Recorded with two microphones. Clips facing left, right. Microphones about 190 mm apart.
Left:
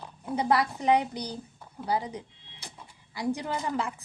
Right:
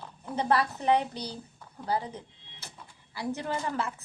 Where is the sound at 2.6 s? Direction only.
15° left (ahead or behind).